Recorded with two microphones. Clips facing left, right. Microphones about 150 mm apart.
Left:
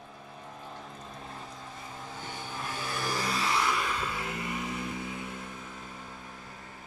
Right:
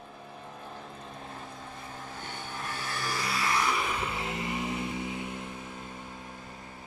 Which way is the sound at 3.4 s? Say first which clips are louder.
Right 2 dB; 10° right (ahead or behind).